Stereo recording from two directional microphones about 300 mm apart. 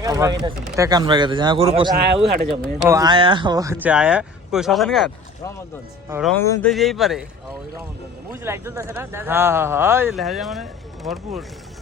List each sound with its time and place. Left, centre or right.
0.0 s speech: centre
8.3 s speech: centre